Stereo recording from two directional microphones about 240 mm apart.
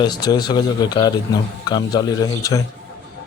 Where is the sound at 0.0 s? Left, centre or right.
Centre.